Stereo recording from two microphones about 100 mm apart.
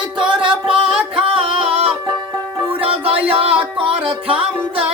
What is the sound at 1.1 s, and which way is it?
Music, 65° right (ahead or behind).